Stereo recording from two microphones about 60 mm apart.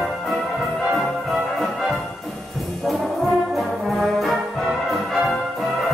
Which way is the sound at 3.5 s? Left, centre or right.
Centre.